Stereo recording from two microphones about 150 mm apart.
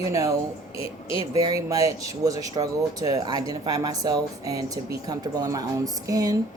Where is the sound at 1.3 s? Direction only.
20° right (ahead or behind).